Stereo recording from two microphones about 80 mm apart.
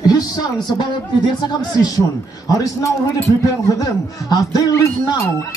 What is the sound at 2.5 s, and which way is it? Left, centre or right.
Speech, left.